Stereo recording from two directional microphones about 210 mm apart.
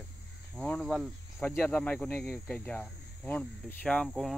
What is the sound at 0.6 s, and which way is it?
Cricket, 5° left (ahead or behind).